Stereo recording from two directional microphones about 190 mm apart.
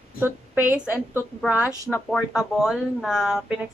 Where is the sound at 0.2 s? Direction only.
10° right (ahead or behind).